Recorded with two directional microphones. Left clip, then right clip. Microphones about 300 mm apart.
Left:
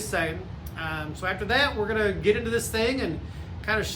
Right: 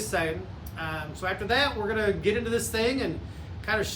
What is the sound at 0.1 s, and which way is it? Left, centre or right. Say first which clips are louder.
Speech: left 1 dB; centre.